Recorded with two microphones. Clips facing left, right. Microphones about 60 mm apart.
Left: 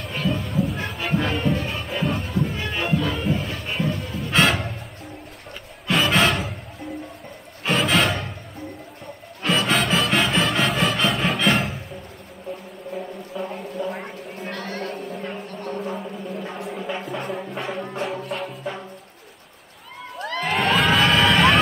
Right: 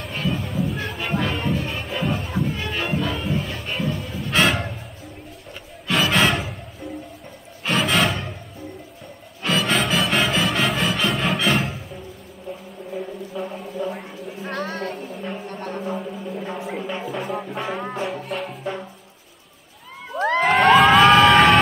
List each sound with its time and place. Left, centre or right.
0.0 s music: centre
9.4 s music: centre
12.9 s music: centre
13.7 s a sound: centre
14.5 s a sound: right
15.4 s music: right
15.8 s music: centre
20.7 s emergency vehicle: centre